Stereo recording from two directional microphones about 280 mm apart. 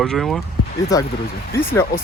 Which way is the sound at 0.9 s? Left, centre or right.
Centre.